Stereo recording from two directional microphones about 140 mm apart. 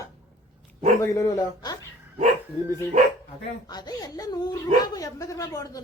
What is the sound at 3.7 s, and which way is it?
Speech, 30° left (ahead or behind).